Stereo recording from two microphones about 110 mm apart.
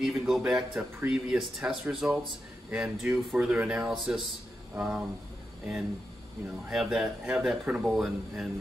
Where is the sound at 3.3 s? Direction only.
10° right (ahead or behind).